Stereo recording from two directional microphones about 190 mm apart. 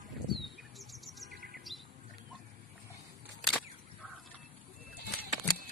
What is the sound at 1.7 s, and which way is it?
Squawk, centre (ahead or behind).